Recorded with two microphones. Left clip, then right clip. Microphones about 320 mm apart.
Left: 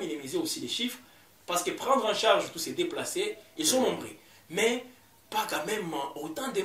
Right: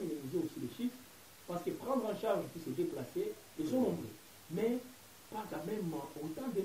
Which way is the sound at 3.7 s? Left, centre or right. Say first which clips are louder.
Left 9 dB; centre.